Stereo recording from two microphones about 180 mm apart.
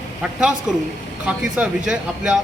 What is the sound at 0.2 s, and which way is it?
Speech, 5° right (ahead or behind).